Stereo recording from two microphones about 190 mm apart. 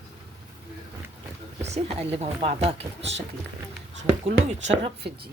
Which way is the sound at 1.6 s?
35° right (ahead or behind).